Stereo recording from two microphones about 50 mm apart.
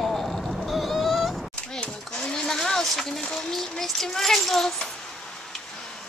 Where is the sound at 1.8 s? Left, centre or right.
Centre.